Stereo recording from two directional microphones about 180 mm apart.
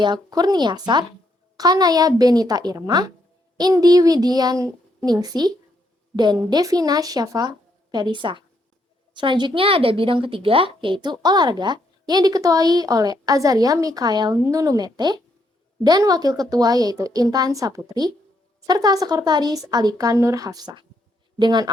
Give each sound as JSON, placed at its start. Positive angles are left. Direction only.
{"t": 0.0, "sound": "a woman's voice", "side_deg": -25}